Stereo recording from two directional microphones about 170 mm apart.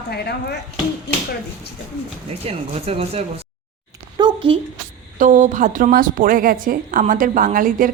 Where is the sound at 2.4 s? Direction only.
35° right (ahead or behind).